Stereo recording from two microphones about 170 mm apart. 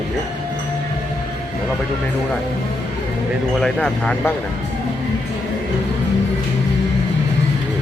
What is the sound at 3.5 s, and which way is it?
Speech, 5° left (ahead or behind).